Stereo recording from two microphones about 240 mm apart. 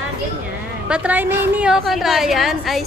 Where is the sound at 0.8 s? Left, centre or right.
Centre.